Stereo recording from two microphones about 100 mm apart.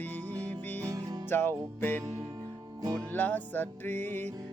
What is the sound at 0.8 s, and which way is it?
Music, 40° right (ahead or behind).